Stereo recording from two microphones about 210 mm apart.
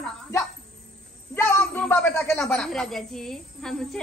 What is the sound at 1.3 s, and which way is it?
A man's voice, 10° left (ahead or behind).